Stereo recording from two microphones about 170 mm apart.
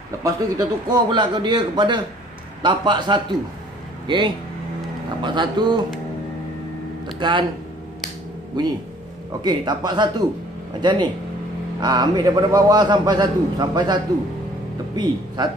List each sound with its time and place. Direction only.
0.2 s a man's voice: 25° right (ahead or behind)
5.2 s a man's voice: 25° right (ahead or behind)
7.2 s speech: 30° right (ahead or behind)
8.6 s a man's voice: 25° right (ahead or behind)